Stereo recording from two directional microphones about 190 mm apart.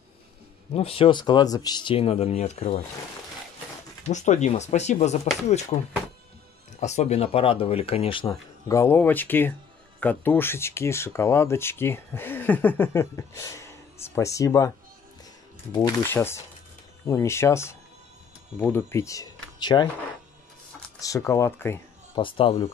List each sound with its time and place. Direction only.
0.7 s speech: 30° left (ahead or behind)
4.0 s speech: 40° left (ahead or behind)
6.8 s speech: 35° left (ahead or behind); by 14.7 s 15° left (ahead or behind)
15.7 s speech: 20° left (ahead or behind)
21.0 s speech: 15° left (ahead or behind)
22.1 s speech: 25° left (ahead or behind)